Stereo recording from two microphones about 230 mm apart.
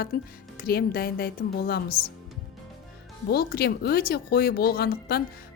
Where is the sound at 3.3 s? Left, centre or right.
Left.